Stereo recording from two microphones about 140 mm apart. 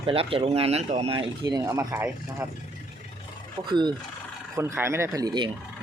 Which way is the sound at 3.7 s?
35° right (ahead or behind).